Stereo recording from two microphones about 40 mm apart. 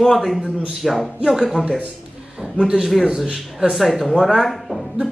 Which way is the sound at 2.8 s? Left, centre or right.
Centre.